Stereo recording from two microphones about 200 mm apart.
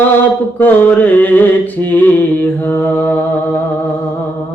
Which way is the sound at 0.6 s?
10° left (ahead or behind).